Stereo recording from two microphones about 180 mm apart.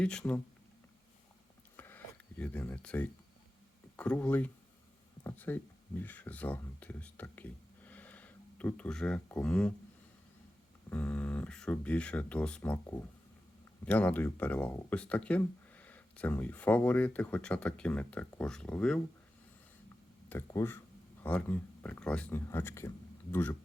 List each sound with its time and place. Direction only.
0.0 s speech: 5° left (ahead or behind)
1.7 s a sound: 10° left (ahead or behind)
2.4 s speech: 10° left (ahead or behind)
10.8 s speech: 10° left (ahead or behind)
20.3 s speech: 15° left (ahead or behind)